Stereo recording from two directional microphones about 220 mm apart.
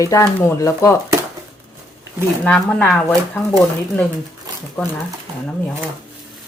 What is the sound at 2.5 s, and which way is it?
Speech, 5° left (ahead or behind).